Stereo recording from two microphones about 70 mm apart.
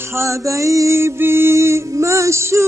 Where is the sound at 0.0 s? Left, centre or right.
Right.